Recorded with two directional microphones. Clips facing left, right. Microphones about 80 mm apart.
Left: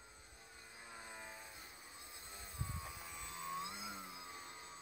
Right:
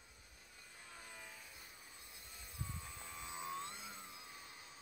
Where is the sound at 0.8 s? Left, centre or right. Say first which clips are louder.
Left 3 dB; left.